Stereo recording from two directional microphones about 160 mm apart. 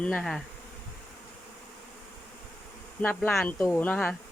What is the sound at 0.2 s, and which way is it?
Speech, centre (ahead or behind).